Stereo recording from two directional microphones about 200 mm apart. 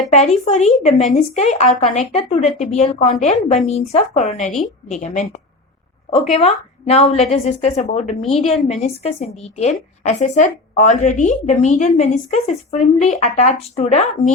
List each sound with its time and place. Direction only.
0.1 s a woman's voice: 30° left (ahead or behind)